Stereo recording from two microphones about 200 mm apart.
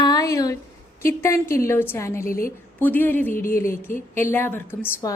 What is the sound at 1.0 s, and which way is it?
A woman's voice, 15° left (ahead or behind).